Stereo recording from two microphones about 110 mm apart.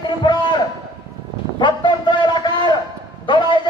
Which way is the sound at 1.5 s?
45° left (ahead or behind).